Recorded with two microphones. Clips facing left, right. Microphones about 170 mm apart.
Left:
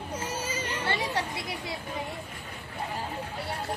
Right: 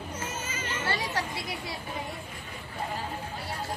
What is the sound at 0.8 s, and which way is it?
Children playing, 25° left (ahead or behind).